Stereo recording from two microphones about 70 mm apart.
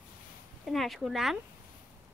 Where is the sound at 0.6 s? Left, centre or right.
Centre.